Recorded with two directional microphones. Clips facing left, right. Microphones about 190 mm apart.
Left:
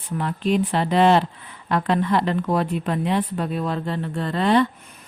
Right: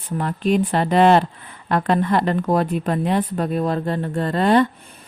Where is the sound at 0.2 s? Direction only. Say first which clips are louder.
Right 2 dB; 50° right (ahead or behind).